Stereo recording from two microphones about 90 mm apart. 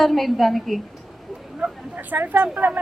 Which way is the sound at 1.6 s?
20° right (ahead or behind).